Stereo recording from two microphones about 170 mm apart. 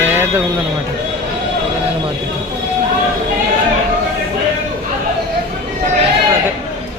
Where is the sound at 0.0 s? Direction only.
15° right (ahead or behind).